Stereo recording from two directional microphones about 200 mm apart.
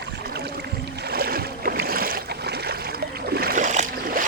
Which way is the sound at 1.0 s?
50° right (ahead or behind).